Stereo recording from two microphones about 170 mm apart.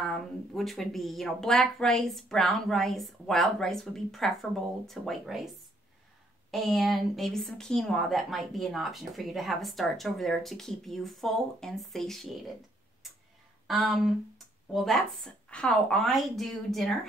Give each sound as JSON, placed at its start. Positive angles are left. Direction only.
{"t": 0.0, "sound": "speech", "side_deg": 0}
{"t": 13.7, "sound": "speech", "side_deg": 0}